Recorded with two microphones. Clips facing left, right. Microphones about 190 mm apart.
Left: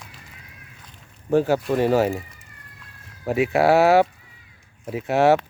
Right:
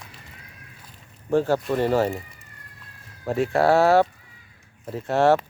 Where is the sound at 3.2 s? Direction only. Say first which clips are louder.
Left 2 dB; 10° left (ahead or behind).